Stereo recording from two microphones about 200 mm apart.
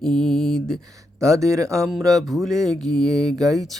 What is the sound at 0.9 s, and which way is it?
Speech, 15° right (ahead or behind).